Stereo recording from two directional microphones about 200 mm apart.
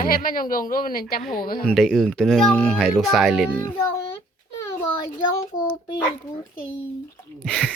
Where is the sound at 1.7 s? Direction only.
Centre (ahead or behind).